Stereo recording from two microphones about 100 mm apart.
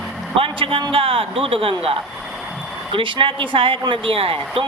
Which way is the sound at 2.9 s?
60° right (ahead or behind).